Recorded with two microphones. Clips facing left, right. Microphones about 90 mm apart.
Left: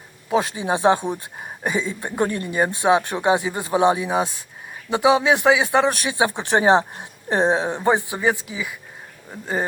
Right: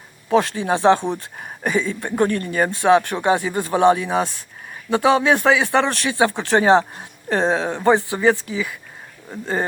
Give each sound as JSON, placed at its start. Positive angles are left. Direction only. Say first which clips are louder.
{"t": 0.3, "sound": "speech", "louder": "right 3 dB", "side_deg": 15}